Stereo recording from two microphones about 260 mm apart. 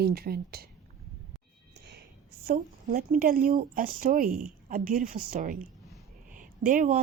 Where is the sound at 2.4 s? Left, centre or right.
Right.